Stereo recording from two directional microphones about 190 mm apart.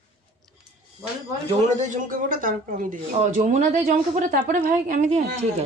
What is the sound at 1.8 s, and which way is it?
Speech, 40° right (ahead or behind).